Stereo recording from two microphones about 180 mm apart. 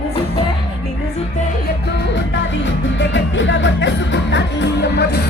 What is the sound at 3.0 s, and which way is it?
Music, 90° left.